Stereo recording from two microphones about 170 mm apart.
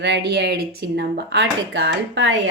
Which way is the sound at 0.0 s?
85° right.